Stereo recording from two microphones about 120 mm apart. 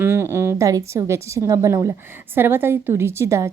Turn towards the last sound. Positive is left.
turn(degrees=-25)  # may be behind; listen again after turning